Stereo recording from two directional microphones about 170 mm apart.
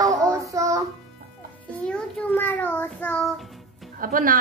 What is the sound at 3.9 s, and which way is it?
Speech, 55° right (ahead or behind).